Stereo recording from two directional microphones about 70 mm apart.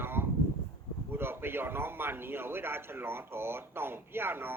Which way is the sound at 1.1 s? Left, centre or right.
Right.